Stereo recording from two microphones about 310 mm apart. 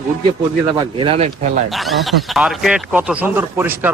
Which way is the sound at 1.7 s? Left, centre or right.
Centre.